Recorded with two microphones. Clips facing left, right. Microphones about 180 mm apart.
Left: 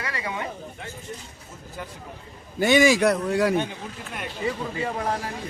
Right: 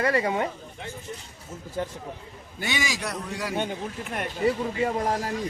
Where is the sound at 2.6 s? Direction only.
50° left (ahead or behind).